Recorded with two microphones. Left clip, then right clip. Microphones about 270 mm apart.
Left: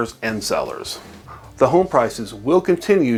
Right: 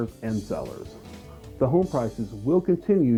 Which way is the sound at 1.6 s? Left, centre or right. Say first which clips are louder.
Left 9 dB; centre.